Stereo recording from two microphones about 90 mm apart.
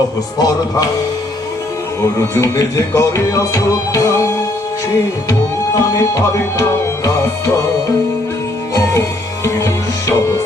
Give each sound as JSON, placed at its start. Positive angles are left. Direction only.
{"t": 0.3, "sound": "music", "side_deg": 45}
{"t": 2.4, "sound": "music", "side_deg": 35}
{"t": 6.6, "sound": "music", "side_deg": 40}
{"t": 8.7, "sound": "music", "side_deg": 35}